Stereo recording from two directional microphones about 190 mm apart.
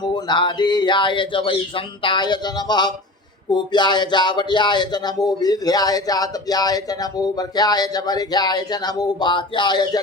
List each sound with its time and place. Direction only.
0.0 s speech: 25° left (ahead or behind)